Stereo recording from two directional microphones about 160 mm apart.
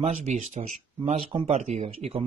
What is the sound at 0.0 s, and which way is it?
Speech, 45° right (ahead or behind).